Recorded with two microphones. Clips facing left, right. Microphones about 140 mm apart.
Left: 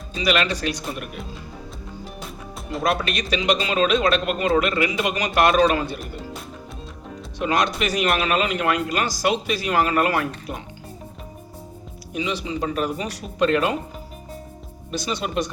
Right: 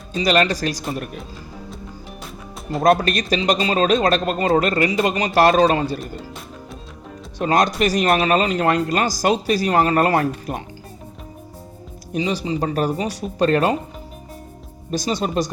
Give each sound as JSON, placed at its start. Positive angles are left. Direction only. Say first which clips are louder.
{"t": 0.1, "sound": "a man's voice", "louder": "right 4 dB", "side_deg": -40}
{"t": 2.8, "sound": "a man's voice", "louder": "right 7 dB", "side_deg": -45}
{"t": 7.3, "sound": "a man's voice", "louder": "right 4 dB", "side_deg": -40}
{"t": 12.1, "sound": "a man's voice", "louder": "right 4 dB", "side_deg": -35}
{"t": 14.8, "sound": "a man's voice", "louder": "right 5 dB", "side_deg": -40}